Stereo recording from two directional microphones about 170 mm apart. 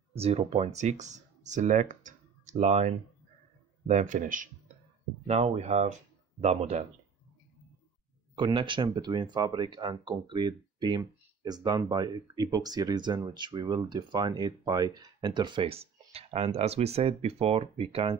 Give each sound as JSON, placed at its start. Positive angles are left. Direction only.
{"t": 0.1, "sound": "speech", "side_deg": -35}
{"t": 8.4, "sound": "speech", "side_deg": -25}